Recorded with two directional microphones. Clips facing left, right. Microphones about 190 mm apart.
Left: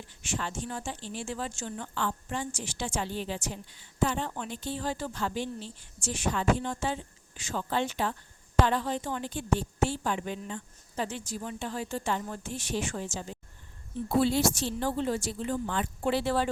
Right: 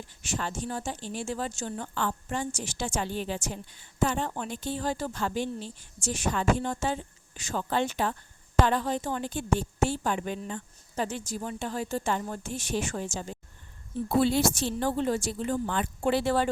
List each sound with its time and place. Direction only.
0.2 s speech: 40° right (ahead or behind)